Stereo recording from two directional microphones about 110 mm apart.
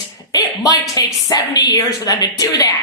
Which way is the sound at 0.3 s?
35° left (ahead or behind).